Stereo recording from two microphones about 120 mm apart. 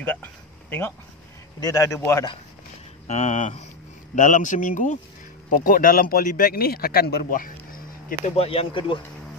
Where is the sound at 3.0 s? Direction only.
75° left (ahead or behind).